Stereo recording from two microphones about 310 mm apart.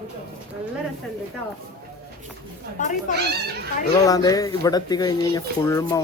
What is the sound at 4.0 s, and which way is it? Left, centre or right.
Speech, centre.